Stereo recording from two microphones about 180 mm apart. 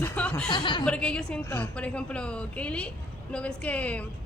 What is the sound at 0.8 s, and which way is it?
A woman's voice, 5° left (ahead or behind).